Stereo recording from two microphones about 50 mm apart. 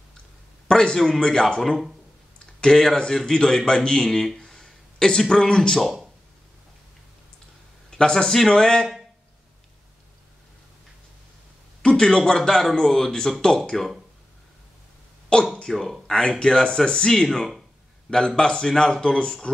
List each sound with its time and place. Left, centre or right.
0.7 s a man's voice: centre
4.1 s a sound: centre
5.3 s a man's voice: centre
5.8 s speech: centre
7.9 s a man's voice: centre
11.8 s a sound: centre
12.3 s a man's voice: centre
15.3 s speech: centre
15.7 s speech: centre
16.1 s a man's voice: centre